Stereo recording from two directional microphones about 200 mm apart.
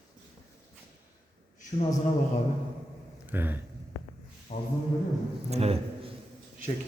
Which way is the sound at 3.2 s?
10° right (ahead or behind).